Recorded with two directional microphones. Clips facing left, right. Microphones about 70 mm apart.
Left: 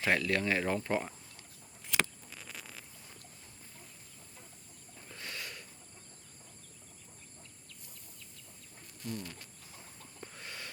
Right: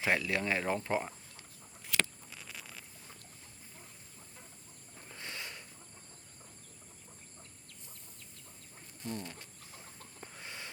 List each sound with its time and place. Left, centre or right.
0.0 s speech: centre
1.9 s a sound: centre
2.3 s a sound: centre
5.0 s sniff: right
9.0 s bird: right
10.2 s chicken: centre